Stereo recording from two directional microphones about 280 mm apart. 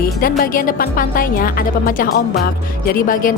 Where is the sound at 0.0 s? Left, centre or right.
Left.